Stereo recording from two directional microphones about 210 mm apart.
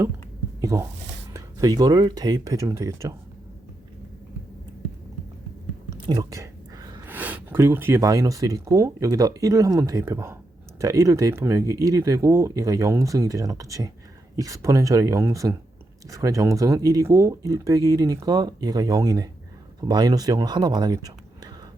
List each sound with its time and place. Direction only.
0.6 s speech: 15° right (ahead or behind)
5.9 s speech: 20° right (ahead or behind)